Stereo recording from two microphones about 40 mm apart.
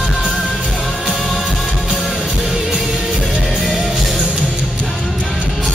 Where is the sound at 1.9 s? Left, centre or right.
Centre.